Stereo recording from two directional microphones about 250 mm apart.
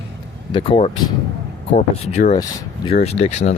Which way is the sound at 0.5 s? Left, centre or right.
Left.